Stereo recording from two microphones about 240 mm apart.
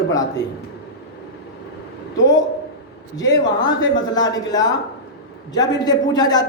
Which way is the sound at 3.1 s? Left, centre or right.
Centre.